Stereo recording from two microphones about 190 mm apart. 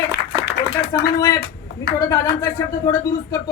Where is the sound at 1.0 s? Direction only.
20° left (ahead or behind).